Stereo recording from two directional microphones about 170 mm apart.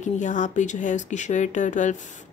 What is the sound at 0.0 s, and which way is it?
Speech, 45° left (ahead or behind).